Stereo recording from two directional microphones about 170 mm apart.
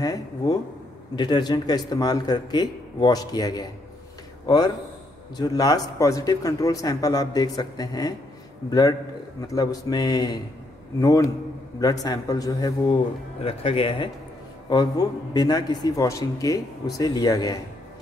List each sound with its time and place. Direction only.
0.0 s a man's voice: 20° left (ahead or behind)